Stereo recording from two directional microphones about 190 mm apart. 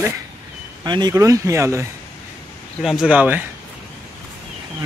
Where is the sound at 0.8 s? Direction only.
20° right (ahead or behind).